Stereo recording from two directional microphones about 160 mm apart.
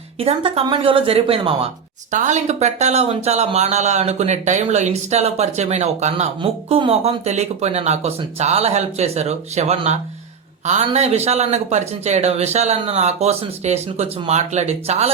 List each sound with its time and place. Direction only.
0.2 s speech: 35° right (ahead or behind)